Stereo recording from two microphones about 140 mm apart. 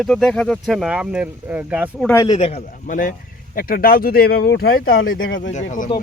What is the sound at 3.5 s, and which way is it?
Speech, 90° left.